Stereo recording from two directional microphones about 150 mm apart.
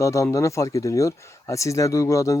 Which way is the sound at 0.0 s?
20° left (ahead or behind).